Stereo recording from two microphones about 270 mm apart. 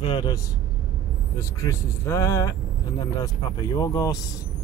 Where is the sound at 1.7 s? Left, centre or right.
Centre.